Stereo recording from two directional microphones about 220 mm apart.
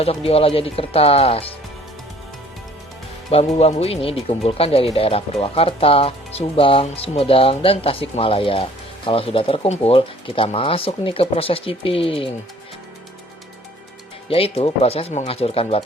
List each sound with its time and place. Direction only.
0.0 s speech: 25° left (ahead or behind)
3.2 s speech: 25° left (ahead or behind)
14.3 s speech: 25° left (ahead or behind)